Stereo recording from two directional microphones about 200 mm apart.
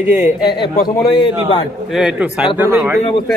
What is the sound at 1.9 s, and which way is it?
A man's voice, 5° right (ahead or behind).